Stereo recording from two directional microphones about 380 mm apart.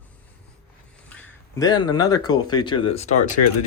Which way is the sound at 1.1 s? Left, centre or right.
Centre.